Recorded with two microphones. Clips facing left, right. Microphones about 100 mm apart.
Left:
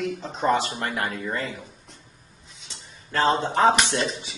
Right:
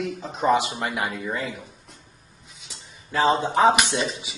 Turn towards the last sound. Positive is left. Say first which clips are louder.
# even
turn(degrees=-5)  # may be behind; listen again after turning